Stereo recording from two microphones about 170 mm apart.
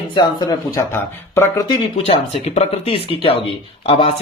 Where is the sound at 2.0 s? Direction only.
35° left (ahead or behind).